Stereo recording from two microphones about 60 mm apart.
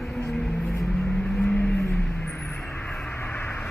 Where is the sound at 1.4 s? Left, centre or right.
Left.